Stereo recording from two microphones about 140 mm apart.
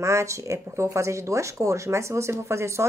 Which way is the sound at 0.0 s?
20° right (ahead or behind).